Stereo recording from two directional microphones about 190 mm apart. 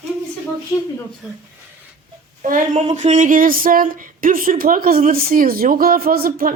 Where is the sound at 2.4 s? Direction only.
45° right (ahead or behind).